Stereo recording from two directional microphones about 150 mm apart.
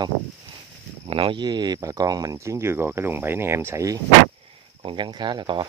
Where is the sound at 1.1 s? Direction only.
35° right (ahead or behind); by 4.0 s 20° right (ahead or behind).